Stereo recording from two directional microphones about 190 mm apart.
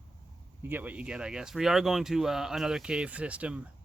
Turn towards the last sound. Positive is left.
turn(degrees=-5)  # may be behind; listen again after turning